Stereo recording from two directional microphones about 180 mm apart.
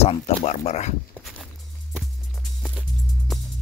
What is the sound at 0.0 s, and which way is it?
Speech, 40° left (ahead or behind).